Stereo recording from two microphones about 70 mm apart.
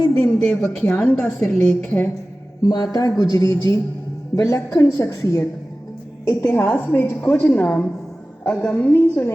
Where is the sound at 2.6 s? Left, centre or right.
Left.